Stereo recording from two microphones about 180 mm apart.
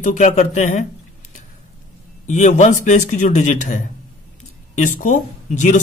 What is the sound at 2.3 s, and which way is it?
Speech, 40° left (ahead or behind).